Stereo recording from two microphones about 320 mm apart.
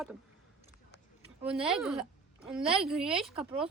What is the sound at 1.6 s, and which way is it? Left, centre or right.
Speech, centre.